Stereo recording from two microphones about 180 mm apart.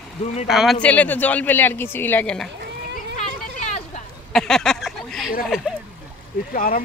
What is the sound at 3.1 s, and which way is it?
Vehicle, 45° left (ahead or behind).